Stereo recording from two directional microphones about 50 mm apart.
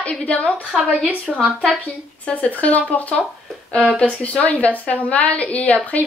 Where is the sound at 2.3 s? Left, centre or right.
Left.